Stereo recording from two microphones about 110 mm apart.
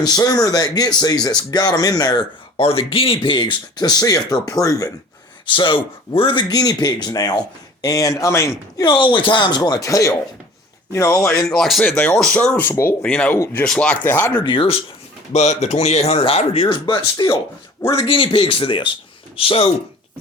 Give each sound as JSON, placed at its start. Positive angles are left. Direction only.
{"t": 0.0, "sound": "speech", "side_deg": 35}
{"t": 2.6, "sound": "speech", "side_deg": 60}
{"t": 5.5, "sound": "speech", "side_deg": 50}
{"t": 6.5, "sound": "speech", "side_deg": 35}
{"t": 8.8, "sound": "speech", "side_deg": 45}
{"t": 11.3, "sound": "speech", "side_deg": 5}
{"t": 14.4, "sound": "speech", "side_deg": 50}
{"t": 15.3, "sound": "speech", "side_deg": 90}
{"t": 16.7, "sound": "speech", "side_deg": 40}
{"t": 19.4, "sound": "speech", "side_deg": 60}